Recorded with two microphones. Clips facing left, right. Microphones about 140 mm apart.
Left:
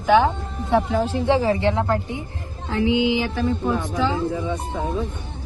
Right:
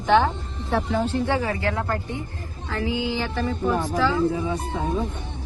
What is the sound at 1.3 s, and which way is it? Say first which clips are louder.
Speech: left 5 dB; 25° left (ahead or behind).